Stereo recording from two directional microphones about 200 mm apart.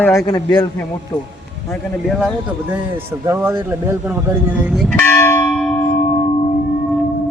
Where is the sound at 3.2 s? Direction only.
10° right (ahead or behind).